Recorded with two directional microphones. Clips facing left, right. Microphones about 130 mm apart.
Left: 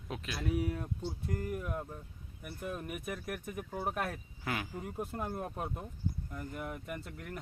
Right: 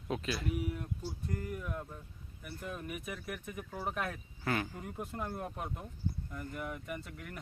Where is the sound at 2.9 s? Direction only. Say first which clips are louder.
Left 2 dB; 45° left (ahead or behind).